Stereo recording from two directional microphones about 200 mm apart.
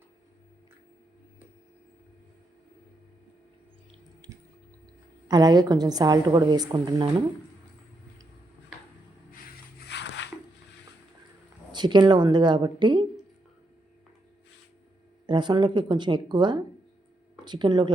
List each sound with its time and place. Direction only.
5.3 s a woman's voice: 20° right (ahead or behind)
9.8 s a sound: 60° left (ahead or behind)
11.7 s a woman's voice: 20° right (ahead or behind)
15.3 s a woman's voice: 20° right (ahead or behind)